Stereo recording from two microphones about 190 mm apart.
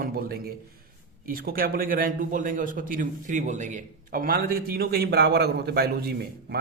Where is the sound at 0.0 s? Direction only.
50° right (ahead or behind).